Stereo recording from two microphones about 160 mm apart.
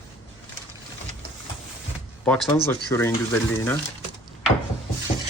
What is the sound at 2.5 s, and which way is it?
Speech, 15° left (ahead or behind).